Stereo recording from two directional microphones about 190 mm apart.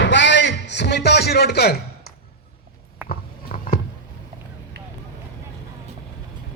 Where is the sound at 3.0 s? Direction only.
45° left (ahead or behind).